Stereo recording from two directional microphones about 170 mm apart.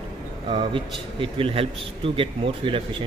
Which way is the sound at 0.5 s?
30° right (ahead or behind).